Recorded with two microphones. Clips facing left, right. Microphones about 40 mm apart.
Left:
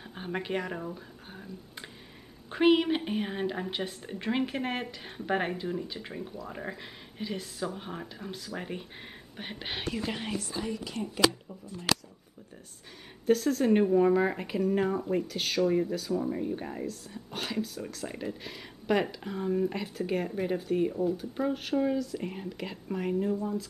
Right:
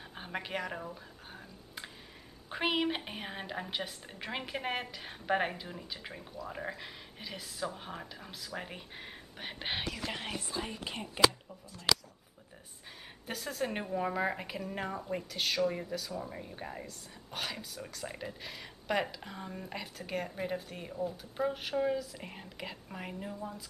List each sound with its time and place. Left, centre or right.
0.1 s speech: centre
9.6 s speech: centre
10.6 s speech: right
13.3 s speech: centre